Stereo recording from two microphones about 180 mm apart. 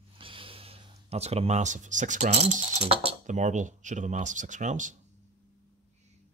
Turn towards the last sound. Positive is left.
turn(degrees=-45)  # may be behind; listen again after turning